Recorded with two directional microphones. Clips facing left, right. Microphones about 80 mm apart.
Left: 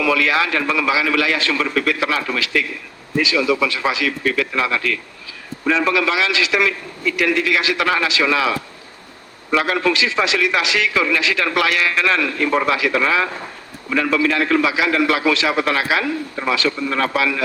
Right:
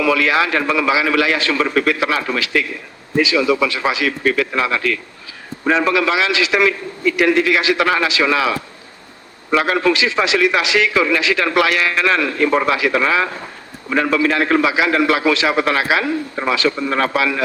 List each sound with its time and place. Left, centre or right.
0.0 s a man's voice: right
9.6 s a man's voice: right